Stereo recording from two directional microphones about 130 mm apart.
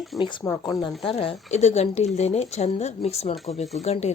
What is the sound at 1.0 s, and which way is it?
Speech, 45° left (ahead or behind).